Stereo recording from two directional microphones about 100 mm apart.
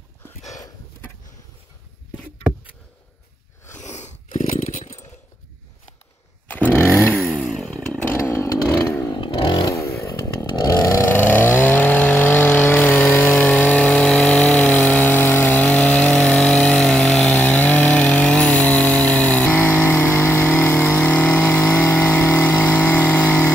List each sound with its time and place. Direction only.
6.5 s chainsaw: 15° left (ahead or behind)
6.9 s vehicle: 20° left (ahead or behind)
7.2 s chainsaw: centre (ahead or behind)
8.2 s chainsaw: 30° left (ahead or behind)
9.1 s chainsaw: 50° left (ahead or behind)
9.7 s chainsaw: 30° left (ahead or behind)
11.1 s vehicle: 20° left (ahead or behind)
13.3 s vehicle: 5° left (ahead or behind)
17.4 s chainsaw: 15° left (ahead or behind)
20.7 s vehicle: 5° left (ahead or behind)